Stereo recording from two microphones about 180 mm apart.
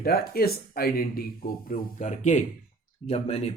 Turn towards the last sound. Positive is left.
turn(degrees=35)  # may be behind; listen again after turning